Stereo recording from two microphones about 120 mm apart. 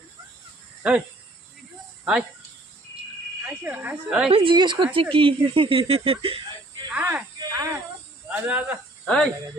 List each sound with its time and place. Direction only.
0.8 s speech: 10° right (ahead or behind)
3.6 s speech: 15° right (ahead or behind)
4.3 s a woman's voice: 50° right (ahead or behind)
6.9 s speech: 10° right (ahead or behind)
7.5 s snake: 20° right (ahead or behind)
8.3 s speech: 10° right (ahead or behind)
9.0 s speech: 5° left (ahead or behind)